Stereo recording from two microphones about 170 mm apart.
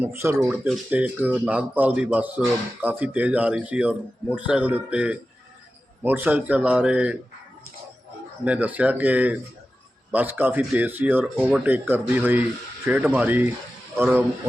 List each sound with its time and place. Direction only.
0.0 s speech: 15° right (ahead or behind)
8.4 s speech: 10° right (ahead or behind)